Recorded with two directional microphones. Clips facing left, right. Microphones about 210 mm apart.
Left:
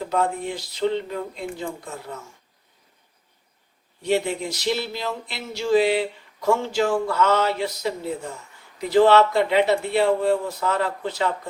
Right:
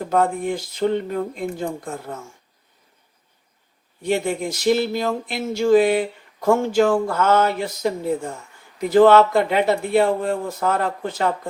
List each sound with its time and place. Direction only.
0.1 s speech: 50° right (ahead or behind)
4.0 s speech: 50° right (ahead or behind)